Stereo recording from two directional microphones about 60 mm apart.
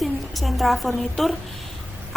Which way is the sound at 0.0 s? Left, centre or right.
Centre.